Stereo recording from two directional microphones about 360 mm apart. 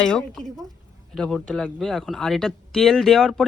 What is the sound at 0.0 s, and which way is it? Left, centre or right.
Speech, centre.